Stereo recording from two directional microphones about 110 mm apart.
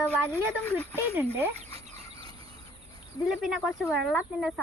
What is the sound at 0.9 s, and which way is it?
Speech, 20° right (ahead or behind).